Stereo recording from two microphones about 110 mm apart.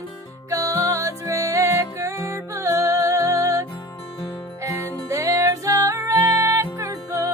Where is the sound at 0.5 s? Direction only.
30° right (ahead or behind).